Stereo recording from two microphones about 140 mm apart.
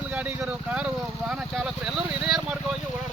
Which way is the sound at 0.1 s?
10° right (ahead or behind).